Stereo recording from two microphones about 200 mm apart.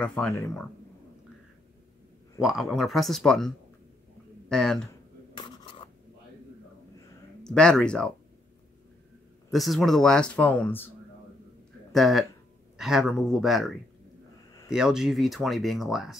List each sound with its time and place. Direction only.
0.0 s speech: 5° left (ahead or behind)
2.4 s speech: centre (ahead or behind)
4.8 s a sound: 20° left (ahead or behind)
7.4 s speech: 5° left (ahead or behind)
9.5 s speech: centre (ahead or behind)
11.9 s speech: centre (ahead or behind)